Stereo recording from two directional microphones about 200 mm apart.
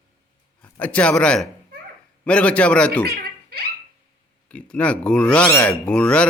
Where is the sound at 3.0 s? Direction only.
50° right (ahead or behind).